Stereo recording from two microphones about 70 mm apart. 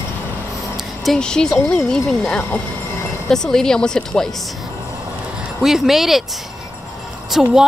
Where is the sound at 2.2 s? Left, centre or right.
Centre.